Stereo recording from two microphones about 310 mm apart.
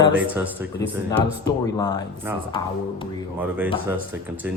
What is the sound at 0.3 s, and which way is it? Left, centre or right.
Speech, centre.